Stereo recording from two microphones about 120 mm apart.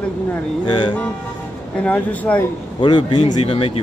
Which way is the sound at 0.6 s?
40° left (ahead or behind).